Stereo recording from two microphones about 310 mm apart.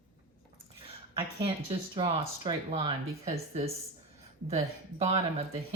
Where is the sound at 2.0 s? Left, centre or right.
Centre.